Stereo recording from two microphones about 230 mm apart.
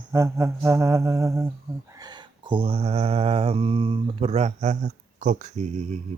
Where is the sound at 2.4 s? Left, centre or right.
Right.